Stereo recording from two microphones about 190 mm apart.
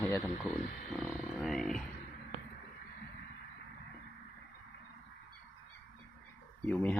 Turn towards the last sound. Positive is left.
turn(degrees=10)  # may be behind; listen again after turning